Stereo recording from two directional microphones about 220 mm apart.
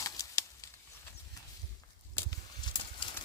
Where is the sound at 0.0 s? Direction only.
15° left (ahead or behind).